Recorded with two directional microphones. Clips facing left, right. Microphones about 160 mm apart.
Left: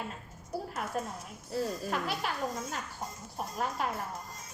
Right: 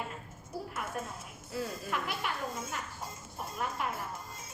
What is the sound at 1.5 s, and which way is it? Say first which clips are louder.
Speech: left 3 dB; 35° left (ahead or behind).